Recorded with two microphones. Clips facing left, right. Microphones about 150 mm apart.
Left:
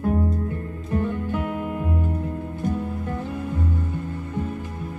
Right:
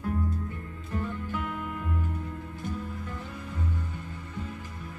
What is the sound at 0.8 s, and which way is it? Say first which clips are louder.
Music: left 9 dB; 55° left (ahead or behind).